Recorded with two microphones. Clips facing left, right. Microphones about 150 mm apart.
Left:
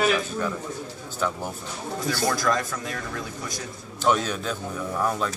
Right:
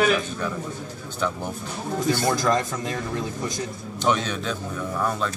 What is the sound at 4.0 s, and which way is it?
Speech, 5° left (ahead or behind).